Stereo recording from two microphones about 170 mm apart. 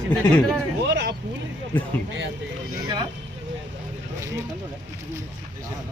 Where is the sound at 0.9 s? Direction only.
90° right.